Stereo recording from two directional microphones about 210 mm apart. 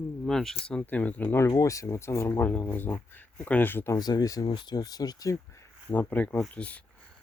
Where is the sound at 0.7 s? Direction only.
5° left (ahead or behind).